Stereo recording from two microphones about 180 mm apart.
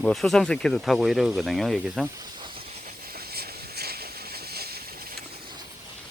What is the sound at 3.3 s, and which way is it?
Vehicle, 60° right (ahead or behind).